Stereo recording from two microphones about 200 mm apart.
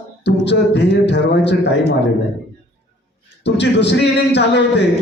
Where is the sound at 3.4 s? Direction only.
60° left (ahead or behind).